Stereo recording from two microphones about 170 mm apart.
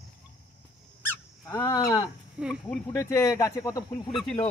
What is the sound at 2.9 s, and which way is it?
Speech, 15° left (ahead or behind).